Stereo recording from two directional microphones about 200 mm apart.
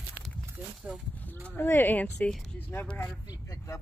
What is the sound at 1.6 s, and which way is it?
Speech, 10° left (ahead or behind).